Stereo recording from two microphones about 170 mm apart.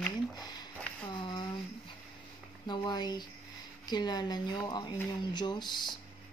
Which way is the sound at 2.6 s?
25° left (ahead or behind).